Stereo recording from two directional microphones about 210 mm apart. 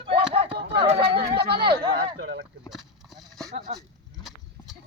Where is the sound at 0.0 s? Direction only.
25° right (ahead or behind).